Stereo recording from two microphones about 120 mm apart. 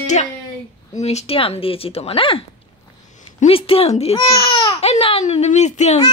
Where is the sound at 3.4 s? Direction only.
50° left (ahead or behind).